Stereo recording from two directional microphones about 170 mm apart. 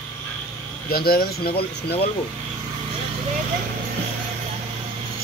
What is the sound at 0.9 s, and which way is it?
Speech, 65° left (ahead or behind).